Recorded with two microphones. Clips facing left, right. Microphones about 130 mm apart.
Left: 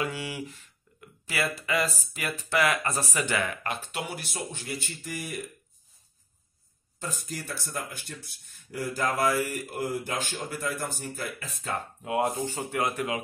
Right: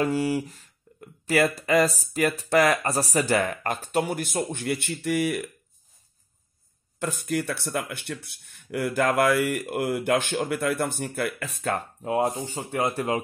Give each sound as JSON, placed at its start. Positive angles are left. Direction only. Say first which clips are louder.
{"t": 0.0, "sound": "speech", "louder": "right 8 dB", "side_deg": -40}
{"t": 7.2, "sound": "speech", "louder": "right 10 dB", "side_deg": -65}
{"t": 12.0, "sound": "speech", "louder": "right 1 dB", "side_deg": -35}